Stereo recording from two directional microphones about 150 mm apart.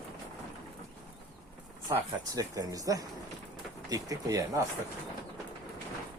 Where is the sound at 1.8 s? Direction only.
25° right (ahead or behind).